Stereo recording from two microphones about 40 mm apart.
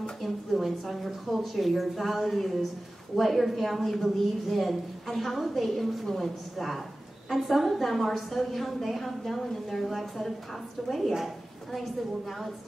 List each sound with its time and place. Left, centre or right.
0.2 s a woman's voice: centre